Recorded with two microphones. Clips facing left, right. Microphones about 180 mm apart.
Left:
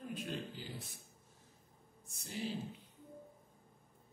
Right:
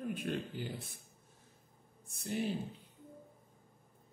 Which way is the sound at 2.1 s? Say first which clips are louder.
Right 7 dB; 55° right (ahead or behind).